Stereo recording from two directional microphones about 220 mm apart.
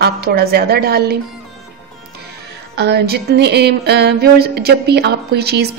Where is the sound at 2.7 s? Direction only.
50° right (ahead or behind).